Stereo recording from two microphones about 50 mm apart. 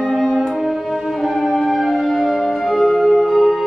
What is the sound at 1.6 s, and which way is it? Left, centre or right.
Music, centre.